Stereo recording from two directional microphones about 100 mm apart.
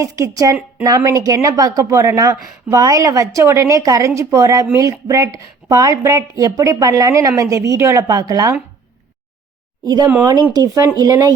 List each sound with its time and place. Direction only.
0.0 s speech: 35° right (ahead or behind)
9.8 s speech: 45° right (ahead or behind)